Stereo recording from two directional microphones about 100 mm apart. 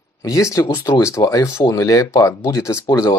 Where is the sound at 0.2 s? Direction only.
30° left (ahead or behind).